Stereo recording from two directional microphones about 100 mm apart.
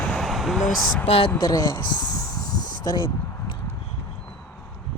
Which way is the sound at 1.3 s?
40° left (ahead or behind).